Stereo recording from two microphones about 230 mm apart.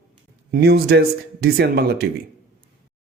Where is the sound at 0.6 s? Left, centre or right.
Right.